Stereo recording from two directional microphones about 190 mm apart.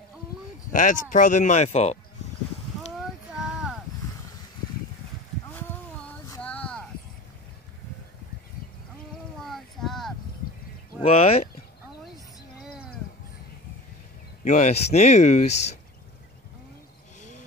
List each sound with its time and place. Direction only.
0.7 s speech: 40° left (ahead or behind)
3.0 s a sound: 5° right (ahead or behind)
5.5 s a sound: 10° left (ahead or behind)
9.4 s child singing: centre (ahead or behind)
11.0 s speech: 30° left (ahead or behind)
14.4 s speech: 40° left (ahead or behind)